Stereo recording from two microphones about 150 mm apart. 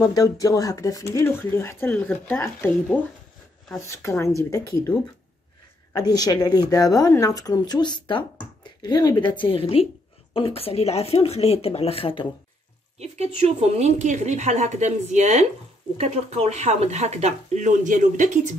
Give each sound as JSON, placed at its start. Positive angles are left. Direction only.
{"t": 0.1, "sound": "a woman's voice", "side_deg": 20}
{"t": 5.9, "sound": "a woman's voice", "side_deg": 25}
{"t": 13.0, "sound": "a woman's voice", "side_deg": -45}